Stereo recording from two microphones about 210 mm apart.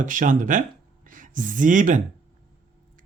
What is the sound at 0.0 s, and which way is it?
Speech, 40° right (ahead or behind).